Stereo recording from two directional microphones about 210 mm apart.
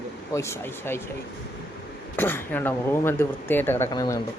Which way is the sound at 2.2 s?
10° left (ahead or behind).